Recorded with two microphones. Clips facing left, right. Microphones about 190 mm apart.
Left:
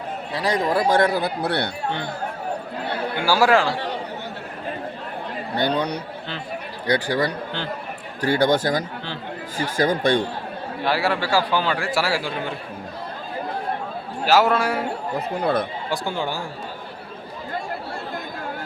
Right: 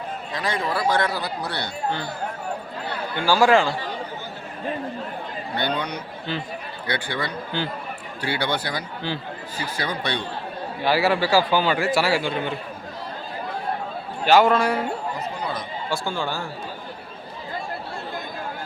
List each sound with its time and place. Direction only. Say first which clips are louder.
0.3 s speech: left 4 dB; 40° left (ahead or behind)
0.9 s speech: left 3 dB; 50° left (ahead or behind)
3.2 s a man's voice: right 1 dB; 10° left (ahead or behind)
5.5 s speech: left 4 dB; 35° left (ahead or behind)
10.8 s a man's voice: right 2 dB; 5° right (ahead or behind)
14.3 s a man's voice: right 1 dB; 5° left (ahead or behind)
15.4 s speech: left 8 dB; 55° left (ahead or behind)
15.9 s a man's voice: left 1 dB; 15° left (ahead or behind)